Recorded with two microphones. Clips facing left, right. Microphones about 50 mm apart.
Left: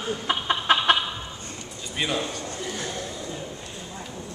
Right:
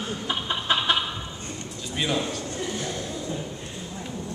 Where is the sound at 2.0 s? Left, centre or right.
Centre.